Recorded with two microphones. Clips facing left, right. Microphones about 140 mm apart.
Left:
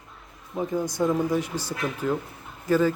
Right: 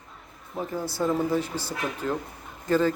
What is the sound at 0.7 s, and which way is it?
Speech, 15° left (ahead or behind).